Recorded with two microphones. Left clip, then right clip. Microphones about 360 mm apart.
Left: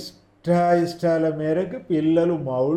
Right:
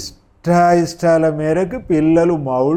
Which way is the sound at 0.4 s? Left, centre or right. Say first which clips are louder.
Right 6 dB; right.